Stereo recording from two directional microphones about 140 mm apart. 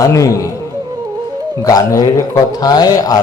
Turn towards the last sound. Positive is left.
turn(degrees=25)  # may be behind; listen again after turning